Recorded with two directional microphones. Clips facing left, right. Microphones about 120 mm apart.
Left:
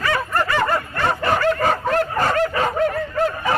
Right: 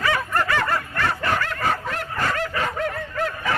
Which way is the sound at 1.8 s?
45° left (ahead or behind).